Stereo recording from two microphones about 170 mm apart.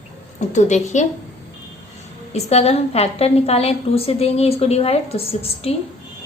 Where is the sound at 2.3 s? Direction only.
35° left (ahead or behind).